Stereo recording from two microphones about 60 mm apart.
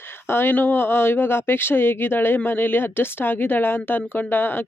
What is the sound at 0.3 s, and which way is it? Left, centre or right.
Speech, left.